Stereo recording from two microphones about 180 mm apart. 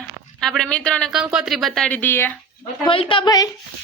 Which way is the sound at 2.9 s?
30° left (ahead or behind).